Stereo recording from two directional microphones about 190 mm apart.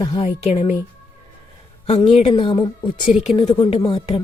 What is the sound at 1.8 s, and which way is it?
Speech, 30° left (ahead or behind).